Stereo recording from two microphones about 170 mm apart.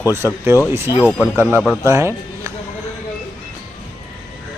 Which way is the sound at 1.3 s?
10° right (ahead or behind).